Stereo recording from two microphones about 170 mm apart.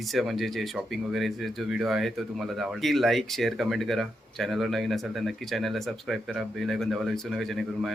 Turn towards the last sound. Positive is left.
turn(degrees=0)  # may be behind; listen again after turning